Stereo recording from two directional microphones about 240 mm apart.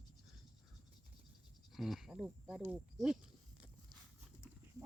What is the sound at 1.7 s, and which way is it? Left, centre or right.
Speech, centre.